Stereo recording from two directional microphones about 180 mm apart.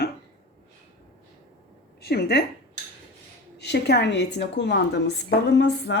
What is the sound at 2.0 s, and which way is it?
Speech, 60° left (ahead or behind).